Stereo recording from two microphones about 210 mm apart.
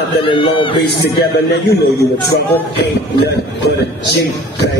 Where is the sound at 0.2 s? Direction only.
25° left (ahead or behind).